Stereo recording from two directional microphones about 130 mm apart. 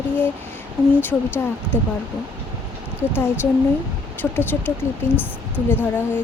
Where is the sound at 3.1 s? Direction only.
15° left (ahead or behind).